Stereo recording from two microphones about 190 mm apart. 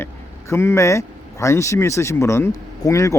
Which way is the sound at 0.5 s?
15° left (ahead or behind).